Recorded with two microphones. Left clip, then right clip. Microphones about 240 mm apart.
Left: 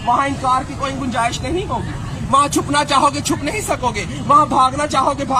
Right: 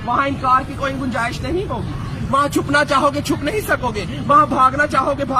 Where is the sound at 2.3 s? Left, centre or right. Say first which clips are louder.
Left 2 dB; centre.